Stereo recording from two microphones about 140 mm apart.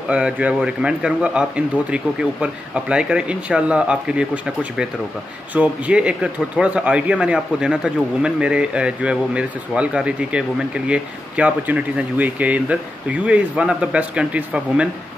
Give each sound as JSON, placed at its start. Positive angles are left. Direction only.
{"t": 0.1, "sound": "speech", "side_deg": -10}
{"t": 2.4, "sound": "speech", "side_deg": -5}
{"t": 5.5, "sound": "speech", "side_deg": -10}